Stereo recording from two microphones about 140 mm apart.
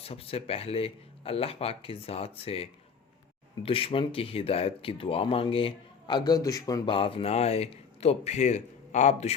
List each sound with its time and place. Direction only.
0.0 s speech: 45° left (ahead or behind); by 6.9 s 25° left (ahead or behind)
6.9 s speech: 40° left (ahead or behind)